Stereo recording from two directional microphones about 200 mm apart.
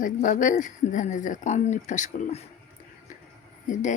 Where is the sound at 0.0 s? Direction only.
40° left (ahead or behind).